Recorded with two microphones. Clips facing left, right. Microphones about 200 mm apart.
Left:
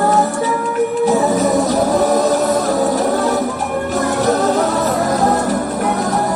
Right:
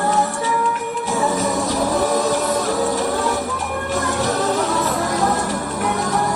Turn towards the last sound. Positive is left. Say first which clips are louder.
# left 5 dB
turn(degrees=40)  # may be behind; listen again after turning